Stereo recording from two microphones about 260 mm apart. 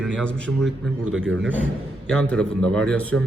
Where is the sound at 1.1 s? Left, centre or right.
Right.